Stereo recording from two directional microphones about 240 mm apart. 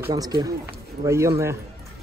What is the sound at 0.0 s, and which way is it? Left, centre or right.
Speech, centre.